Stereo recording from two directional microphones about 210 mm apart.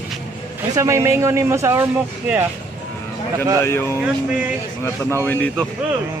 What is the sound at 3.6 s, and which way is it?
Speech, 10° left (ahead or behind).